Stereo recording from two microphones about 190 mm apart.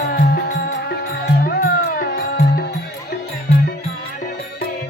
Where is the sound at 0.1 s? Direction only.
55° left (ahead or behind).